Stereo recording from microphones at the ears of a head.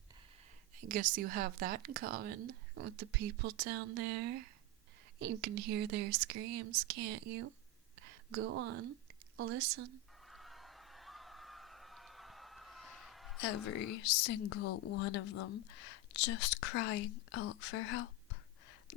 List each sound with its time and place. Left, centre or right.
0.8 s speech: right
10.2 s a sound: centre
13.3 s speech: left